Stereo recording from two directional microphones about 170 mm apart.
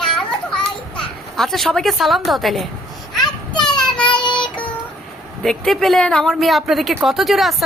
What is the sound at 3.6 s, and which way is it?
Child singing, 5° left (ahead or behind).